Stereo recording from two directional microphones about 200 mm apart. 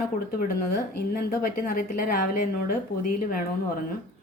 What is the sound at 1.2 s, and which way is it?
A woman's voice, 45° left (ahead or behind).